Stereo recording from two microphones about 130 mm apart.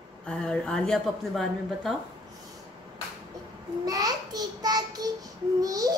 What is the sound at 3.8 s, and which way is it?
A child's voice, 30° right (ahead or behind).